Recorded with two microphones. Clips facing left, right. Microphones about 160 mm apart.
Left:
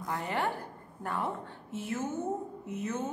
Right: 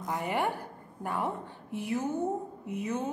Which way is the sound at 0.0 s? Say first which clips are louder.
Right 2 dB; 15° right (ahead or behind).